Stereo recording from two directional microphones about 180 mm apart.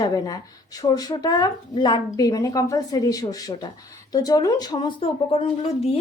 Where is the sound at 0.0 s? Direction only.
20° left (ahead or behind).